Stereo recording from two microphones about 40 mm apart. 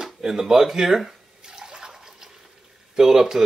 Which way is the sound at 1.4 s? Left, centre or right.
Centre.